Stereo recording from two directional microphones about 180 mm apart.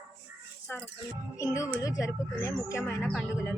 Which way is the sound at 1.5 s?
15° left (ahead or behind).